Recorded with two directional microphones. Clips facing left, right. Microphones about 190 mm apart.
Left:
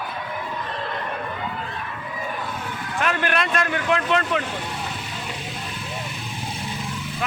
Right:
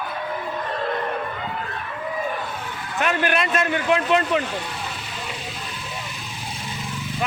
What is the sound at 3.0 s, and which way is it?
A man's voice, 5° right (ahead or behind).